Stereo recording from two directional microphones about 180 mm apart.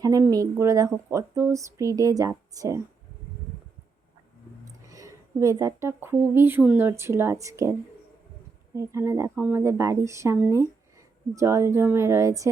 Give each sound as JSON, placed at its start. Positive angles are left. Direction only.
{"t": 0.0, "sound": "speech", "side_deg": -20}
{"t": 4.9, "sound": "speech", "side_deg": -20}